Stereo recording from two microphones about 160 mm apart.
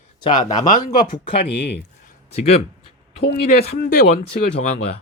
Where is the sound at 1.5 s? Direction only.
90° left.